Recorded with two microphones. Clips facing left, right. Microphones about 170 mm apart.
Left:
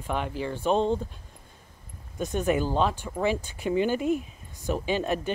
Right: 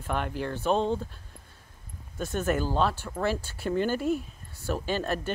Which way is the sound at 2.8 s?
15° left (ahead or behind).